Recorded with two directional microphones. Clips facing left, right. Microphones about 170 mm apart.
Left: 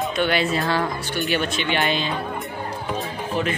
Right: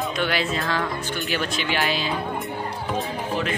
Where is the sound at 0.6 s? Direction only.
25° left (ahead or behind).